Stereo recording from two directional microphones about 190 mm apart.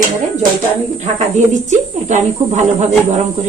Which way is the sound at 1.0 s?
40° right (ahead or behind).